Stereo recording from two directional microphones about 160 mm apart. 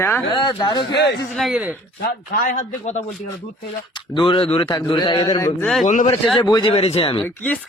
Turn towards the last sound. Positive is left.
turn(degrees=10)  # may be behind; listen again after turning